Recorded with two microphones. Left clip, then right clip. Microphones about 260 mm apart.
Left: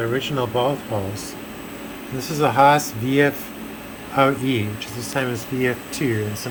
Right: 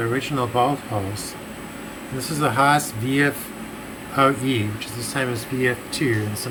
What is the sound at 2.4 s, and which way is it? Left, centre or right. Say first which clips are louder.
Speech: left 3 dB; centre.